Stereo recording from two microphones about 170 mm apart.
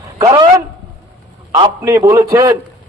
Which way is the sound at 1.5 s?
20° right (ahead or behind).